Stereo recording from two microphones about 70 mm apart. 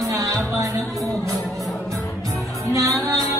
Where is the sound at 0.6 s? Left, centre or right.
Right.